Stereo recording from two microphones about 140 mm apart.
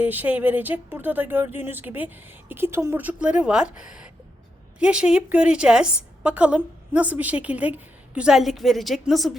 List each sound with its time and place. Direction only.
0.0 s a woman's voice: 10° right (ahead or behind)